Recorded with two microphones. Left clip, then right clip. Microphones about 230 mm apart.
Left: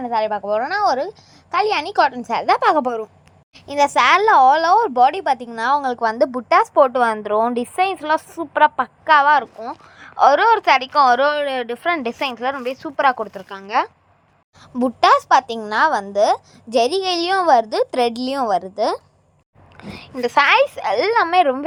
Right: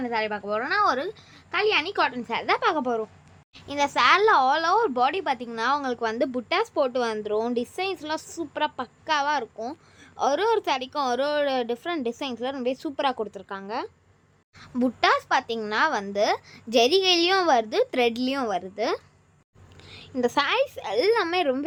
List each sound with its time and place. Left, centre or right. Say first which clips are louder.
0.0 s a woman's voice: left 7 dB; centre
19.7 s a sound: left 9 dB; centre
20.1 s a child's voice: left 9 dB; centre